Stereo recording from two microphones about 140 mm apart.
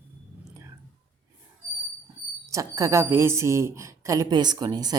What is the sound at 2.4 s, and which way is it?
A woman's voice, 25° right (ahead or behind).